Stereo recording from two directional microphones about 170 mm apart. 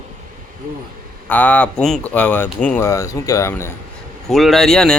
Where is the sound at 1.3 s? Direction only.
10° left (ahead or behind).